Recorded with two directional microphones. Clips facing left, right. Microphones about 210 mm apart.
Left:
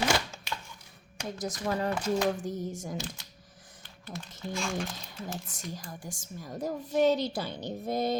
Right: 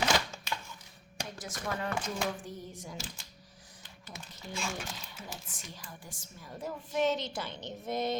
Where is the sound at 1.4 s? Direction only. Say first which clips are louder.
Left 6 dB; 35° left (ahead or behind).